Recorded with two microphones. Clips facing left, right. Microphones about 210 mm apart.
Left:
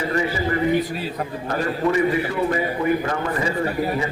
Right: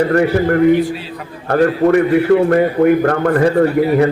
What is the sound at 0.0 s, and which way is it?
A man's voice, 65° right (ahead or behind).